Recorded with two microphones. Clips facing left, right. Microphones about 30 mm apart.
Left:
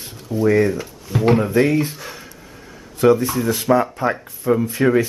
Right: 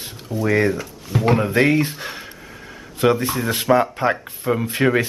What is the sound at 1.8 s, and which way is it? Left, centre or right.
Speech, right.